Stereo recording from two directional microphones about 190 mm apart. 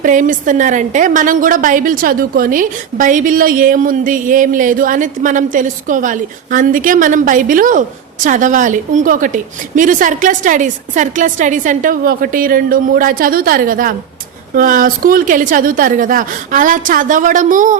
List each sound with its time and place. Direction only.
0.0 s a woman's voice: 45° right (ahead or behind)